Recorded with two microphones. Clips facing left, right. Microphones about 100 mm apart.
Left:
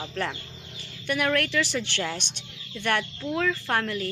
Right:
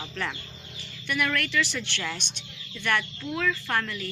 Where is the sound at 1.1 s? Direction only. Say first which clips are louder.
Left 3 dB; 40° left (ahead or behind).